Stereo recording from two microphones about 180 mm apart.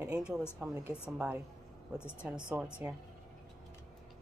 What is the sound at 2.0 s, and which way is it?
Speech, 10° left (ahead or behind).